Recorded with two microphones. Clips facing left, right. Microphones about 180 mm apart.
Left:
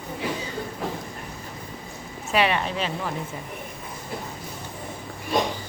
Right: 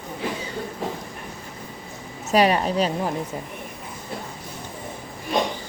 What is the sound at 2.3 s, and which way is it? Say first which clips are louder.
Speech: right 4 dB; 40° right (ahead or behind).